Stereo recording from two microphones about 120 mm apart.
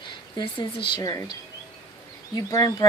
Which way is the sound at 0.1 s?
40° left (ahead or behind).